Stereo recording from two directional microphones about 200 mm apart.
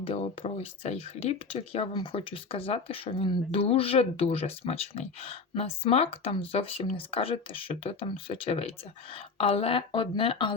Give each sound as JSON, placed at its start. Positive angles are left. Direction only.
{"t": 0.0, "sound": "speech", "side_deg": 30}